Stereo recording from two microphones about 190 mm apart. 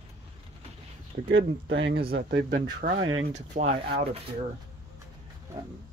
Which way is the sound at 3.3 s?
40° right (ahead or behind).